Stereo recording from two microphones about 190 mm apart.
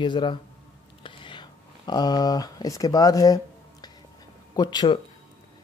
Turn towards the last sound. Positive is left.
turn(degrees=20)  # may be behind; listen again after turning